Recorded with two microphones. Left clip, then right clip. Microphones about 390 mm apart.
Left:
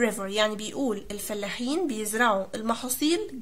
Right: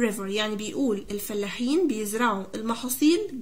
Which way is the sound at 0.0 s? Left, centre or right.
Centre.